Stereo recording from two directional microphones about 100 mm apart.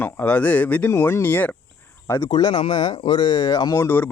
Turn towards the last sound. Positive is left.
turn(degrees=35)  # may be behind; listen again after turning